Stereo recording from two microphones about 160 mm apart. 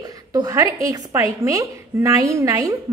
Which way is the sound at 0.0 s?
25° right (ahead or behind).